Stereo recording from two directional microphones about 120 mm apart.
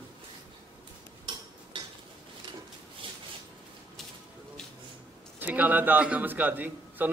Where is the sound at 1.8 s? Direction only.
40° right (ahead or behind).